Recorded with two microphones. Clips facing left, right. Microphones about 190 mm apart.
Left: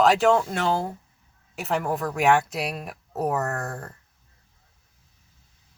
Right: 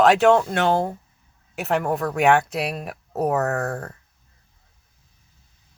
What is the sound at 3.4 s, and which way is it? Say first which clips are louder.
Speech: right 5 dB; 65° right (ahead or behind).